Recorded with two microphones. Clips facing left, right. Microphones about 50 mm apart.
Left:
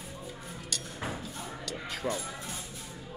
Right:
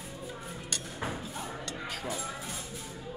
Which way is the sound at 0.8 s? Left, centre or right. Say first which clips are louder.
Right 1 dB; centre.